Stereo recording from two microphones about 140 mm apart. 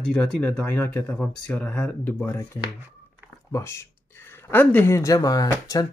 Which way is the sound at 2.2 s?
20° left (ahead or behind).